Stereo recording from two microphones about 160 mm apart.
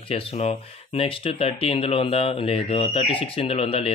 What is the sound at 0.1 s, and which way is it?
Speech, 40° left (ahead or behind).